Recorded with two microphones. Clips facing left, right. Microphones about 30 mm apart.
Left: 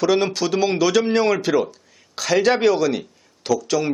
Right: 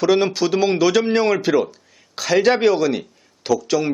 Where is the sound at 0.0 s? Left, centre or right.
Centre.